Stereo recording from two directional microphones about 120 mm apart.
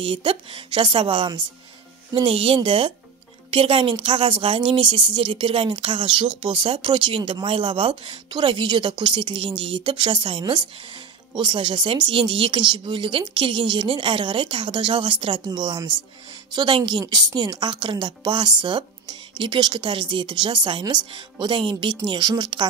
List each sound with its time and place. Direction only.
0.0 s a woman's voice: 45° right (ahead or behind)